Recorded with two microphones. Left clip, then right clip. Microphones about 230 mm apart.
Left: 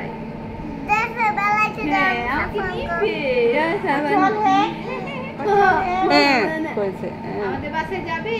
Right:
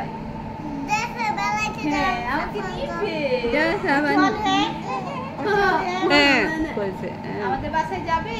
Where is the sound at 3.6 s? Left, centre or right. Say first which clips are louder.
Even; centre.